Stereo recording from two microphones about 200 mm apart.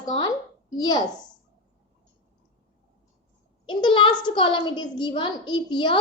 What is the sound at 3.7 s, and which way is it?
A woman's voice, 25° left (ahead or behind).